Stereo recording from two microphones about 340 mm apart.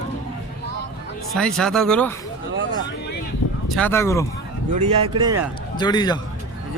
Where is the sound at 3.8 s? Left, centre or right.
Centre.